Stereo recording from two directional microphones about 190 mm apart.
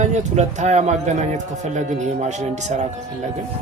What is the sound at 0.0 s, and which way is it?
Speech, 40° right (ahead or behind).